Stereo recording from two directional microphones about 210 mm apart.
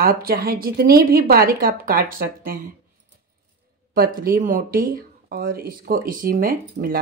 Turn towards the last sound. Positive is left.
turn(degrees=-40)  # may be behind; listen again after turning